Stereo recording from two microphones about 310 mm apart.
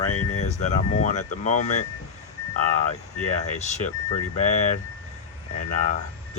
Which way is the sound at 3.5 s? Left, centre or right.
Left.